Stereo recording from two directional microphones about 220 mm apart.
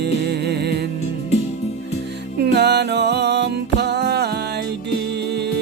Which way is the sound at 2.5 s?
50° right (ahead or behind).